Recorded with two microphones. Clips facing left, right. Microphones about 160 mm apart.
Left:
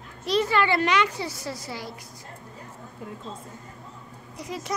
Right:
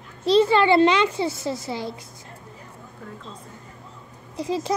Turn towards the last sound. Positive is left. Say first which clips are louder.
# right 8 dB
turn(degrees=-30)  # may be behind; listen again after turning